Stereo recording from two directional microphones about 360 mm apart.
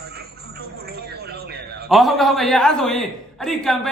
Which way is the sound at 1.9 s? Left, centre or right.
Centre.